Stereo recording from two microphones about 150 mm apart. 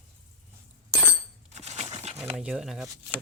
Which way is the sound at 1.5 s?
50° right (ahead or behind).